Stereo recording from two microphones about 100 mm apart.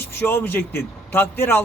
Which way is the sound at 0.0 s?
20° left (ahead or behind).